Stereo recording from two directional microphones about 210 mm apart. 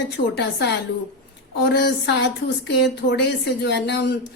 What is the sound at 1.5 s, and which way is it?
Speech, 55° left (ahead or behind).